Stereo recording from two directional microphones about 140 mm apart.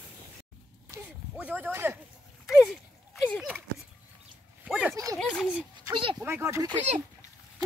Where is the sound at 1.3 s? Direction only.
10° right (ahead or behind).